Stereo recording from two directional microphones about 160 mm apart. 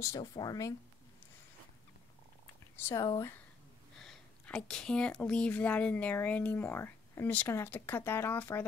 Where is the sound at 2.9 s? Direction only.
20° left (ahead or behind).